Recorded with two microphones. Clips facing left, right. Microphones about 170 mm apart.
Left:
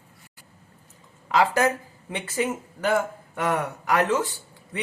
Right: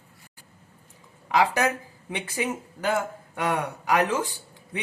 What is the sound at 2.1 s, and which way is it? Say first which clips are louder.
Speech: left 2 dB; 15° right (ahead or behind).